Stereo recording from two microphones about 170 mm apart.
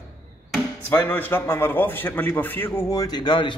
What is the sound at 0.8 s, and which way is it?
A man's voice, 10° left (ahead or behind).